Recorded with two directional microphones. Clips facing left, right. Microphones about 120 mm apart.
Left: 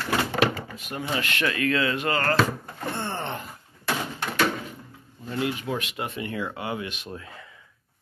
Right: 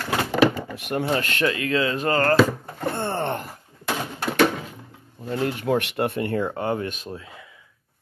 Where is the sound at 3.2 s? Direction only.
65° right (ahead or behind).